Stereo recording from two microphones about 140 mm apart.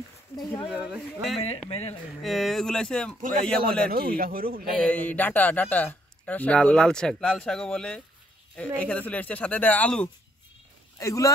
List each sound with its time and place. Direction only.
0.7 s speech: 5° right (ahead or behind)
1.7 s speech: 45° left (ahead or behind)
2.2 s speech: centre (ahead or behind)
3.9 s a man's voice: 90° right
4.8 s speech: 10° left (ahead or behind)
11.0 s speech: 20° left (ahead or behind)